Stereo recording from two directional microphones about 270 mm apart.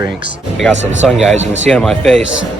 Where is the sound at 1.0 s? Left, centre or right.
Centre.